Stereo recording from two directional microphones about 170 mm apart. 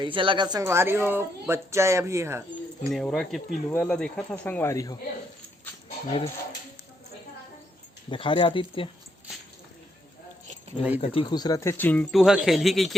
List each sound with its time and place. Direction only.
0.0 s speech: 30° right (ahead or behind)
2.9 s speech: centre (ahead or behind); by 4.9 s 20° left (ahead or behind)
8.1 s speech: 30° left (ahead or behind)
10.9 s speech: 35° left (ahead or behind); by 12.0 s 10° left (ahead or behind)
12.1 s speech: centre (ahead or behind)